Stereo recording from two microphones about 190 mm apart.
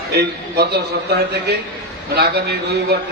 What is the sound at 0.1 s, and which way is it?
Speech, 60° right (ahead or behind).